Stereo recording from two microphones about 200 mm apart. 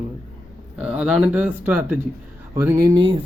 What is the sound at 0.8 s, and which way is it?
A man's voice, 5° right (ahead or behind).